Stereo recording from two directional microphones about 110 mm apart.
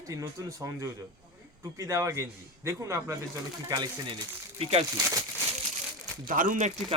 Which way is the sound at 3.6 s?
40° right (ahead or behind).